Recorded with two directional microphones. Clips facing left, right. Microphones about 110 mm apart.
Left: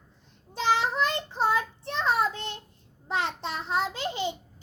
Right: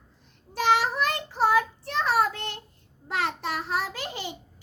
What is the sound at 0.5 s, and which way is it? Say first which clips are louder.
Child singing: right 2 dB; 20° left (ahead or behind).